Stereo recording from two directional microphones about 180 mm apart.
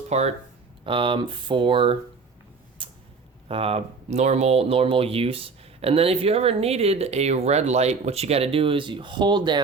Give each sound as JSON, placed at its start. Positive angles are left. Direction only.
{"t": 0.1, "sound": "speech", "side_deg": -35}
{"t": 2.8, "sound": "a sound", "side_deg": -30}
{"t": 3.5, "sound": "speech", "side_deg": -30}